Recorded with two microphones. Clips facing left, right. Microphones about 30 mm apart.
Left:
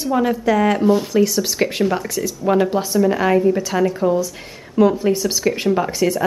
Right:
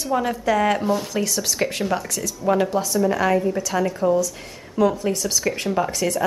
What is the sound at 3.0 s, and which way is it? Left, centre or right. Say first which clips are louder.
A woman's voice: left 4 dB; centre.